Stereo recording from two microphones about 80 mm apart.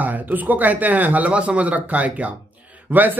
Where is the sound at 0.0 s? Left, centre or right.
Right.